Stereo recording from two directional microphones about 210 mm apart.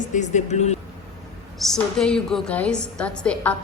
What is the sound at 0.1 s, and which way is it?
Speech, 35° left (ahead or behind).